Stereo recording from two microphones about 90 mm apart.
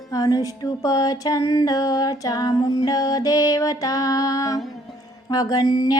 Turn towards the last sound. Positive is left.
turn(degrees=50)  # may be behind; listen again after turning